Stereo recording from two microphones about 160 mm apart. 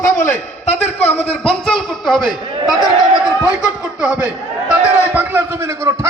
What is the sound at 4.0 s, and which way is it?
A man's voice, 10° right (ahead or behind).